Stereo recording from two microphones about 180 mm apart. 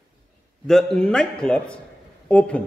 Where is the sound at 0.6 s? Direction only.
5° left (ahead or behind).